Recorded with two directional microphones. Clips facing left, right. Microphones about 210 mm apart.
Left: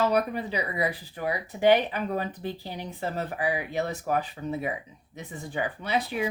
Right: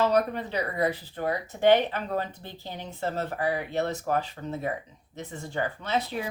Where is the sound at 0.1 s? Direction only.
10° left (ahead or behind).